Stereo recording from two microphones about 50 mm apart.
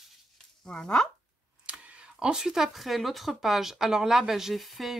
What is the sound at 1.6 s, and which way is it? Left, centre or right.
Camera, right.